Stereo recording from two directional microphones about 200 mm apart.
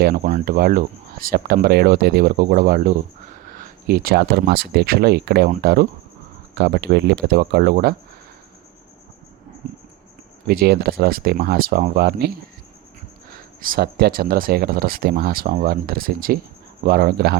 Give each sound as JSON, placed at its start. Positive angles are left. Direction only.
{"t": 0.0, "sound": "speech", "side_deg": -45}
{"t": 10.4, "sound": "speech", "side_deg": -50}
{"t": 13.3, "sound": "speech", "side_deg": -45}